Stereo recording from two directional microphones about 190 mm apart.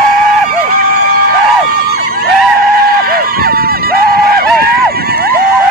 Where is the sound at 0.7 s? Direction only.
50° right (ahead or behind).